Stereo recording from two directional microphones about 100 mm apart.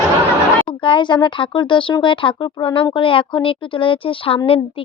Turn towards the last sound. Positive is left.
turn(degrees=65)  # may be behind; listen again after turning